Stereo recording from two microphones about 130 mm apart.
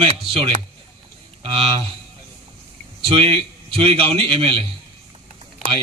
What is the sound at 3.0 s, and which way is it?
A man's voice, 45° right (ahead or behind).